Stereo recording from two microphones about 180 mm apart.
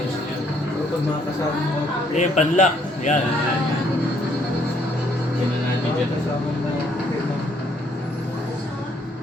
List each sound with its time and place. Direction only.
2.1 s a man's voice: 40° left (ahead or behind)